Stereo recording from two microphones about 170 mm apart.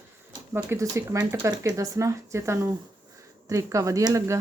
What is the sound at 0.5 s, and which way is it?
Speech, 15° right (ahead or behind).